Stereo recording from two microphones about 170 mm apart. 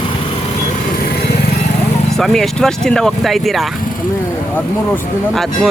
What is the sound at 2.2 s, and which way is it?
Speech, 5° left (ahead or behind).